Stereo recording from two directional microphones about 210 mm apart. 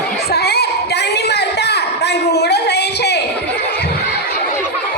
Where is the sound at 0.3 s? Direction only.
50° left (ahead or behind).